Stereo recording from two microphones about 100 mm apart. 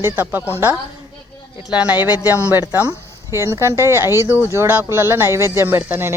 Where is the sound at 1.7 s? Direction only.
10° right (ahead or behind).